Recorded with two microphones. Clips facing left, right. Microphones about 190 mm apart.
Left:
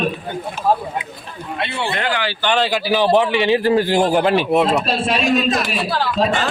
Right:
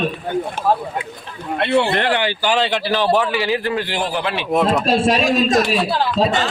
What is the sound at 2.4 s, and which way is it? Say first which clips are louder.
Speech: even; 5° right (ahead or behind).